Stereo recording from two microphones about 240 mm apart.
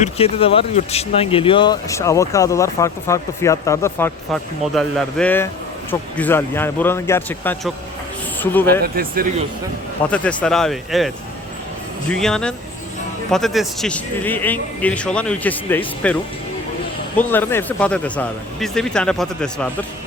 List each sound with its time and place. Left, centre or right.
0.0 s speech: left; by 8.8 s centre
8.8 s speech: right
10.1 s speech: centre
17.2 s speech: centre